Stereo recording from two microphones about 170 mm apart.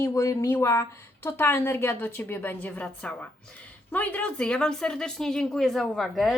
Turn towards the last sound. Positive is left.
turn(degrees=0)  # may be behind; listen again after turning